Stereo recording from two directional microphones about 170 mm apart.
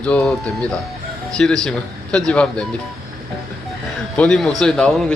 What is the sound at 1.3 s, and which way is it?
A man's voice, 5° left (ahead or behind).